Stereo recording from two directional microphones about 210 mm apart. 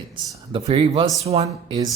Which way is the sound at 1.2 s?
30° right (ahead or behind).